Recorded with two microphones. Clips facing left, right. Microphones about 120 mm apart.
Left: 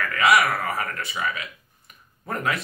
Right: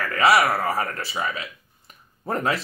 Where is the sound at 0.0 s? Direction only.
35° right (ahead or behind).